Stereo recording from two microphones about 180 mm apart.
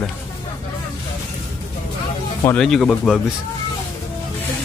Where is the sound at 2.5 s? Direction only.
5° left (ahead or behind).